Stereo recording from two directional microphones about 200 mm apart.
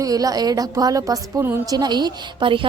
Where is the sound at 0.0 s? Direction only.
20° right (ahead or behind).